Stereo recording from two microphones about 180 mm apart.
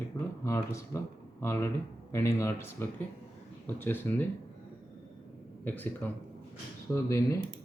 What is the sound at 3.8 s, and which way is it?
Speech, 10° left (ahead or behind).